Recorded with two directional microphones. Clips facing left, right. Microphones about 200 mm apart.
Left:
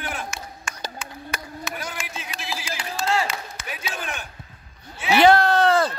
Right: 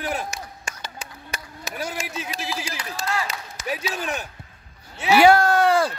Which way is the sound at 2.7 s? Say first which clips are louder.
Left 8 dB; 25° left (ahead or behind).